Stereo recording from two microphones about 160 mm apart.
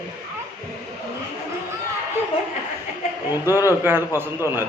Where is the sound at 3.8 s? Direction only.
15° right (ahead or behind).